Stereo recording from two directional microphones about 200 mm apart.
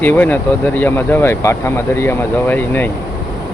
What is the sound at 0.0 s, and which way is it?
Speech, 10° left (ahead or behind).